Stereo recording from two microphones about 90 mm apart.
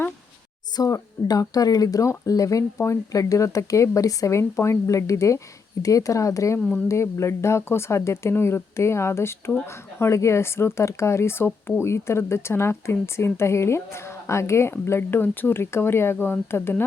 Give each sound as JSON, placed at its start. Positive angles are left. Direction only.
{"t": 0.8, "sound": "speech", "side_deg": 40}
{"t": 6.6, "sound": "speech", "side_deg": 15}
{"t": 6.8, "sound": "speech", "side_deg": 35}